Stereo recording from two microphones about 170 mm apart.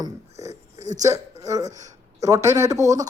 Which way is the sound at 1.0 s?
20° right (ahead or behind).